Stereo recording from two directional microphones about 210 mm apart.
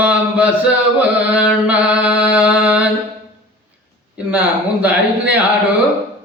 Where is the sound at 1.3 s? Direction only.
5° right (ahead or behind).